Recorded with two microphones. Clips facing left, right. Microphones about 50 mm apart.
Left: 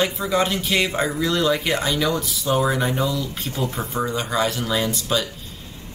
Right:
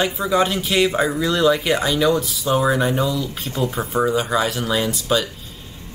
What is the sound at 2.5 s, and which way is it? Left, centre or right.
Speech, centre.